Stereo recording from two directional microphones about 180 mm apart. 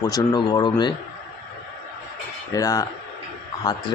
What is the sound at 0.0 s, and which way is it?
Speech, 20° left (ahead or behind).